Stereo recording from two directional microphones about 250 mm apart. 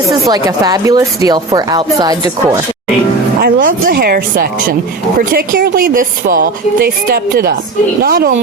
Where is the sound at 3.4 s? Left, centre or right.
Right.